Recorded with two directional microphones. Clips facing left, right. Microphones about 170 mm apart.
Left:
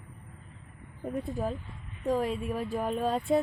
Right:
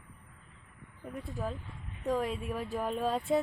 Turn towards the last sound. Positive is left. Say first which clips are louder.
# left 3 dB
turn(degrees=0)  # may be behind; listen again after turning